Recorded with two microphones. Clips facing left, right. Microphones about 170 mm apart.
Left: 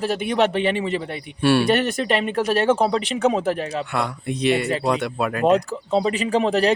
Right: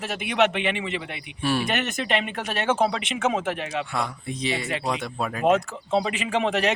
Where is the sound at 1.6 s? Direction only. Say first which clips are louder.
Left 7 dB; 35° left (ahead or behind).